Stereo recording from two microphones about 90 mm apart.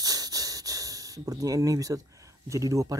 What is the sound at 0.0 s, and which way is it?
Speech, 45° right (ahead or behind).